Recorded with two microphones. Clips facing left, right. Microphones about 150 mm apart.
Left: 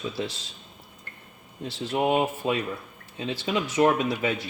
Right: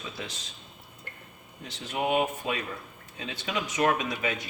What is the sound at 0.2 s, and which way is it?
Speech, 30° left (ahead or behind).